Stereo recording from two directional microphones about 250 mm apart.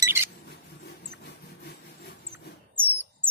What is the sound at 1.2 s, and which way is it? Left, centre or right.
Sawing, left.